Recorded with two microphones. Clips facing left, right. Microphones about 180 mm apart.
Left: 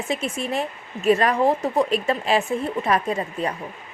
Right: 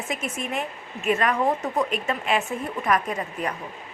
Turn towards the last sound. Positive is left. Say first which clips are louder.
# left 4 dB
turn(degrees=30)  # may be behind; listen again after turning